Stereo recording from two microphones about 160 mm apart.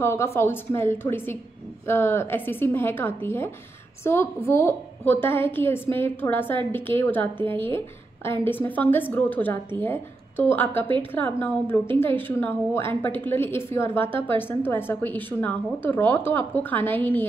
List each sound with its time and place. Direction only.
0.0 s a woman's voice: 15° left (ahead or behind)
7.3 s a woman's voice: 35° right (ahead or behind)
8.2 s a woman's voice: 15° left (ahead or behind)